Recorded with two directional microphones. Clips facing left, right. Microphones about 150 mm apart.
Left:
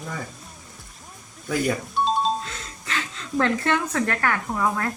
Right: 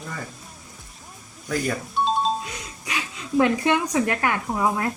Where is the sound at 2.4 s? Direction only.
15° right (ahead or behind).